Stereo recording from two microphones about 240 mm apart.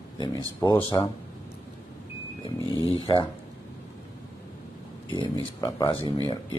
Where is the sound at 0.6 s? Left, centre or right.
Centre.